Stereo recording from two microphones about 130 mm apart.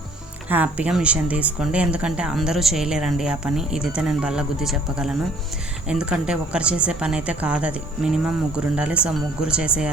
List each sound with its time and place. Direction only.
0.4 s a woman's voice: 10° right (ahead or behind)